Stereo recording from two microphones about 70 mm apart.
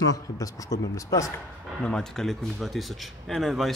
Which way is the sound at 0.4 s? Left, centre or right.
Left.